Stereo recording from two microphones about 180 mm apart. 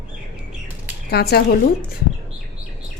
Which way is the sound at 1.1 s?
60° left (ahead or behind).